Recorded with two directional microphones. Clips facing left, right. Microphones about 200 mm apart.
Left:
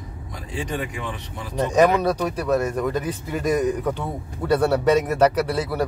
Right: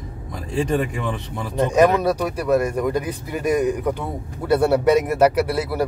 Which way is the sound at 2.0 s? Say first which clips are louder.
Right 1 dB; 10° right (ahead or behind).